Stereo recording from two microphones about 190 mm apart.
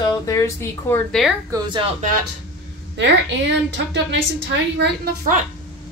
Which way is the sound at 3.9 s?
70° right (ahead or behind).